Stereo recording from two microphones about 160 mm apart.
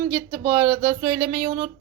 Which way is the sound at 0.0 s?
15° right (ahead or behind).